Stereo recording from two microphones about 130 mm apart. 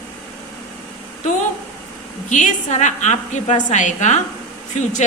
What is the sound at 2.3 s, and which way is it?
A woman's voice, 70° left (ahead or behind).